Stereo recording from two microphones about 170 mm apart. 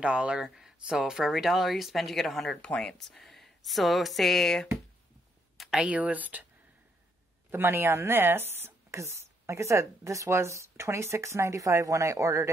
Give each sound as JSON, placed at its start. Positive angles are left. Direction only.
{"t": 0.0, "sound": "a woman's voice", "side_deg": -5}
{"t": 7.5, "sound": "a woman's voice", "side_deg": -15}